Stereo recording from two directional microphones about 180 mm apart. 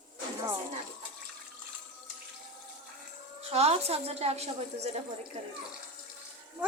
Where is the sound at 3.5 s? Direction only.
35° right (ahead or behind).